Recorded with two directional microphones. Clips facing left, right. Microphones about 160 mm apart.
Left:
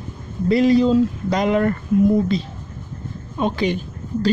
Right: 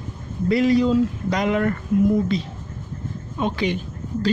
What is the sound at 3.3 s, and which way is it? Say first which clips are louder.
Speech: left 3 dB; 35° left (ahead or behind).